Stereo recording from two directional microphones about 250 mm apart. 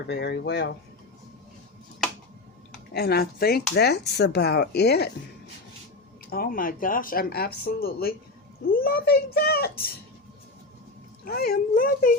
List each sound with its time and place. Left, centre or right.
0.1 s speech: left
2.9 s speech: left
6.3 s speech: left
11.3 s speech: left